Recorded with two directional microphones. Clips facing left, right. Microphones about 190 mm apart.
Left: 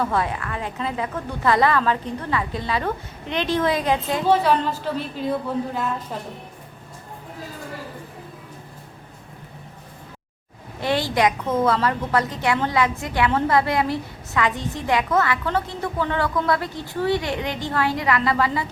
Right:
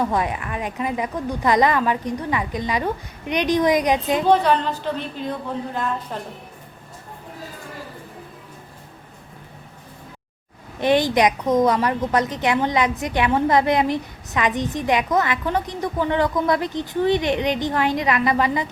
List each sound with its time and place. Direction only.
0.0 s a woman's voice: 15° right (ahead or behind)
4.3 s speech: 5° left (ahead or behind)
10.8 s a woman's voice: 20° right (ahead or behind)